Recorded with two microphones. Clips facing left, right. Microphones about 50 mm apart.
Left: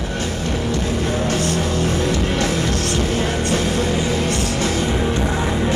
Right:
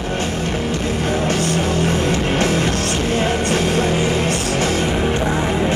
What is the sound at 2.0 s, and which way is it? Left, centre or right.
Music, right.